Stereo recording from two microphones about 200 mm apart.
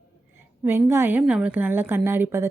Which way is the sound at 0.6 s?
10° right (ahead or behind).